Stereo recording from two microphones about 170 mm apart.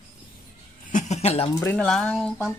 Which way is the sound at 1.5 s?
5° left (ahead or behind).